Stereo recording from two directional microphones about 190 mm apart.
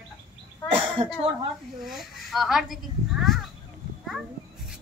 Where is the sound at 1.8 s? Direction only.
Centre (ahead or behind).